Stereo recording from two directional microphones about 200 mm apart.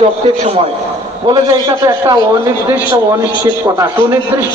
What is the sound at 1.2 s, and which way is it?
Speech, 20° right (ahead or behind).